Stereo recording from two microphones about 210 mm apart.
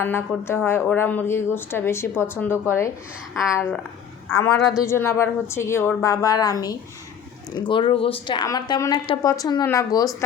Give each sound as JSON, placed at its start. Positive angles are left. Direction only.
{"t": 0.0, "sound": "a woman's voice", "side_deg": 10}